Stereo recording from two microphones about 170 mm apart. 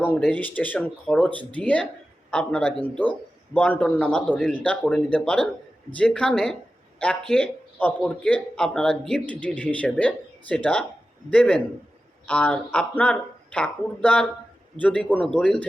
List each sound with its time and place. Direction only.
0.0 s speech: 10° left (ahead or behind)
1.3 s speech: 30° right (ahead or behind)
1.5 s speech: 10° left (ahead or behind)